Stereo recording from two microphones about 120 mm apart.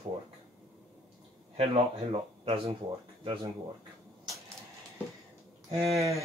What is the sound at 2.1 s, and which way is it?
Speech, 50° right (ahead or behind).